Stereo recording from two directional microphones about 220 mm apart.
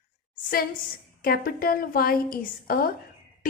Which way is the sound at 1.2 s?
40° left (ahead or behind).